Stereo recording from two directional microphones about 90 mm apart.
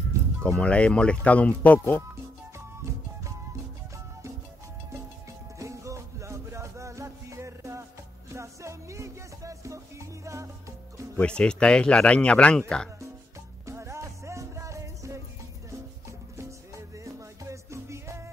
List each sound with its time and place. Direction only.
0.4 s speech: 10° left (ahead or behind)
5.6 s music: 35° right (ahead or behind)
11.1 s speech: 10° left (ahead or behind)
13.7 s music: 30° right (ahead or behind)